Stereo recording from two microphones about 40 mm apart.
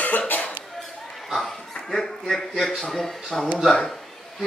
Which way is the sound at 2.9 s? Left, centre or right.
Centre.